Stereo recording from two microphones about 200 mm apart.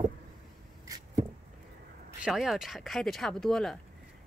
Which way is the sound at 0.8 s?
15° right (ahead or behind).